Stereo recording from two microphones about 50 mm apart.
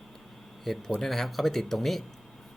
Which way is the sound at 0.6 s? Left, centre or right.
Centre.